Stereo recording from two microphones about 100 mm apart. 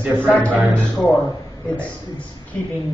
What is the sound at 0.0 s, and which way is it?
Speech, 20° right (ahead or behind).